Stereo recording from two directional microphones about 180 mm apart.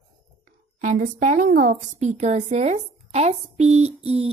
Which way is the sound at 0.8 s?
45° right (ahead or behind).